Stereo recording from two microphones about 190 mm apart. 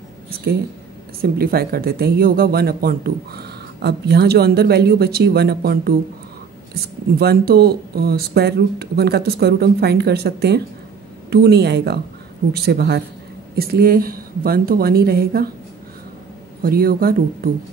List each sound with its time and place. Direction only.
1.2 s a woman's voice: 50° right (ahead or behind)
16.6 s a woman's voice: 50° right (ahead or behind)